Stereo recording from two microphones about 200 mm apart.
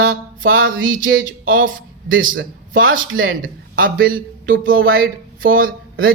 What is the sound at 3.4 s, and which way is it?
A man's voice, 45° right (ahead or behind).